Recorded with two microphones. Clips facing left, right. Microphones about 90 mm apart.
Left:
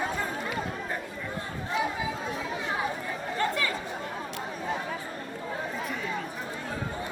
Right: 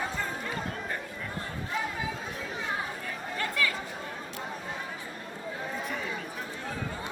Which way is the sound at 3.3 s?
30° left (ahead or behind).